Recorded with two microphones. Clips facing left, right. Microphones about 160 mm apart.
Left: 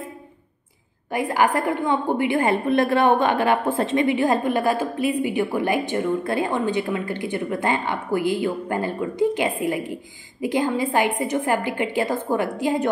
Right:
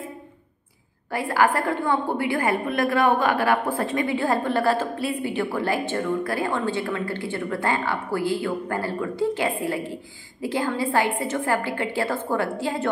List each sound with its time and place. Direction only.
1.1 s a woman's voice: 20° left (ahead or behind)